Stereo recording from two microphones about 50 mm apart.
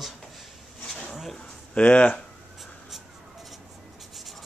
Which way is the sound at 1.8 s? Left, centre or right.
Left.